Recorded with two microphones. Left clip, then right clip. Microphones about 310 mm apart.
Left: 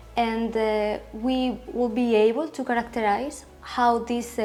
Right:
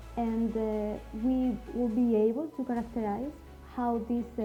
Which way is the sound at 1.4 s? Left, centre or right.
Left.